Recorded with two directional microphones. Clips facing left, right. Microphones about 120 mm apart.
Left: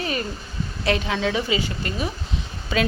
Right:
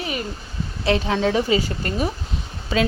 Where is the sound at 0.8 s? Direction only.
30° right (ahead or behind).